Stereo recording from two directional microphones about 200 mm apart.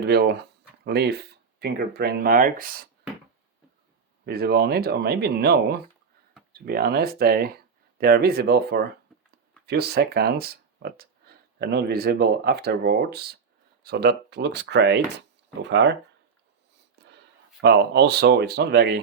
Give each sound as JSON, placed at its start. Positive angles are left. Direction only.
{"t": 0.0, "sound": "speech", "side_deg": -55}
{"t": 4.3, "sound": "speech", "side_deg": -50}
{"t": 17.6, "sound": "speech", "side_deg": -55}